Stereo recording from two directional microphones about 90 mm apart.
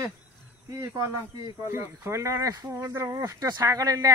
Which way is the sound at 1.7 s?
25° right (ahead or behind).